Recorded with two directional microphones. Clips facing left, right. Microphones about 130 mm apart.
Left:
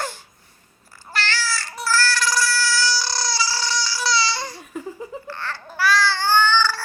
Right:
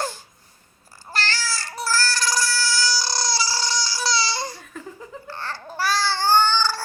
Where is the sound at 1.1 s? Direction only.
40° right (ahead or behind).